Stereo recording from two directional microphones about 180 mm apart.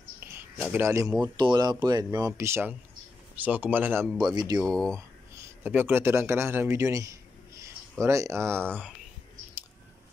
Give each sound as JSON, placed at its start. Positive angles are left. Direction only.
{"t": 0.2, "sound": "a sound", "side_deg": -10}
{"t": 1.3, "sound": "speech", "side_deg": -25}
{"t": 4.6, "sound": "speech", "side_deg": 5}
{"t": 4.9, "sound": "speech", "side_deg": -15}